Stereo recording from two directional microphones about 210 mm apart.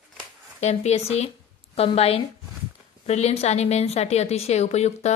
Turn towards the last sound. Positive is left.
turn(degrees=30)  # may be behind; listen again after turning